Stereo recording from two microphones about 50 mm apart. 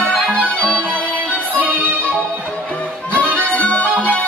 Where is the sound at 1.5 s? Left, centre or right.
Right.